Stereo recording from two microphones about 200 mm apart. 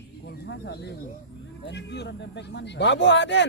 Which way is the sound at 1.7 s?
60° left (ahead or behind).